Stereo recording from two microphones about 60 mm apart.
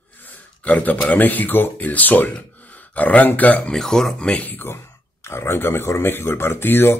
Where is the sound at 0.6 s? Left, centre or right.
Left.